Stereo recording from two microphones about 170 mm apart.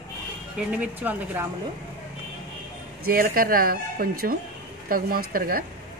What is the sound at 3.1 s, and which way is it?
Speech, 60° right (ahead or behind).